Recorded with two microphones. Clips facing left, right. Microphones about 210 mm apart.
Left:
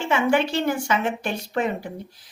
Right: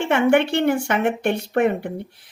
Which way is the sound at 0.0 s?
60° right (ahead or behind).